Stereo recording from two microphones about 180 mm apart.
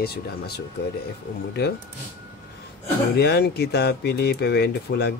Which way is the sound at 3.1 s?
65° left (ahead or behind).